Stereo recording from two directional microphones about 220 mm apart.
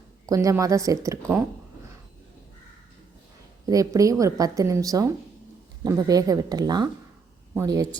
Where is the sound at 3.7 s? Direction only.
15° right (ahead or behind).